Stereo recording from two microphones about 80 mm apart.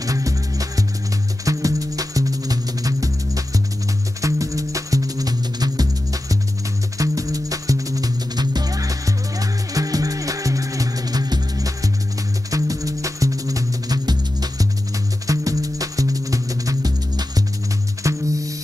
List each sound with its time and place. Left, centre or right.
0.0 s music: right